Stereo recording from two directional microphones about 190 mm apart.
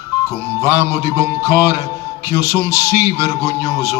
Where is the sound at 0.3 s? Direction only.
15° right (ahead or behind).